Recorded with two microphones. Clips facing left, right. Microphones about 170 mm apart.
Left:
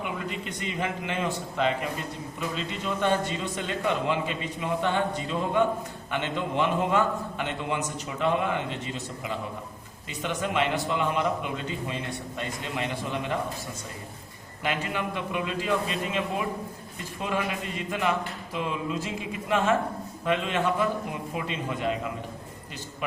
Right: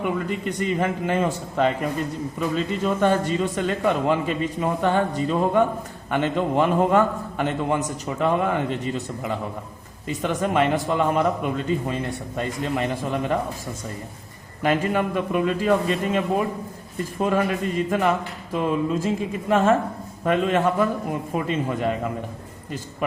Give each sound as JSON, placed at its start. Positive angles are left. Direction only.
{"t": 0.0, "sound": "a man's voice", "side_deg": -45}
{"t": 14.6, "sound": "a man's voice", "side_deg": -45}